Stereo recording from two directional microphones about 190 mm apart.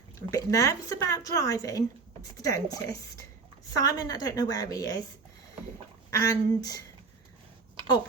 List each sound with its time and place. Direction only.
0.3 s a woman's voice: 15° left (ahead or behind)
6.1 s a woman's voice: 20° left (ahead or behind)